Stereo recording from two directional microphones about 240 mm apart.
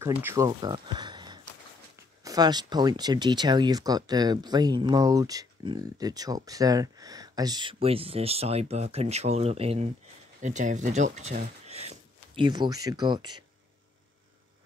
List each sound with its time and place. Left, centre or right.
0.0 s speech: centre